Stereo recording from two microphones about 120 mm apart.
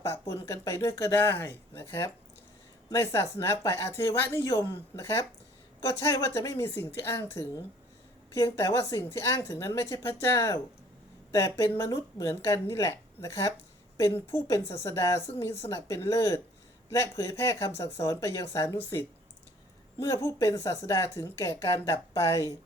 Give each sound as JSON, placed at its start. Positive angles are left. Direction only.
{"t": 0.0, "sound": "speech", "side_deg": 20}
{"t": 20.0, "sound": "speech", "side_deg": 25}